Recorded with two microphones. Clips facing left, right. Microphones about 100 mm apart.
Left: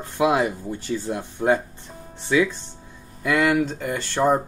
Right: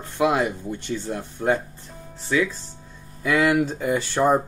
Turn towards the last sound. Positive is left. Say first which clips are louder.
# right 1 dB
turn(degrees=-10)  # may be behind; listen again after turning